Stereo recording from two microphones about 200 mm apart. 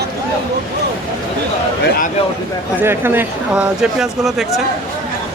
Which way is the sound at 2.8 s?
10° right (ahead or behind).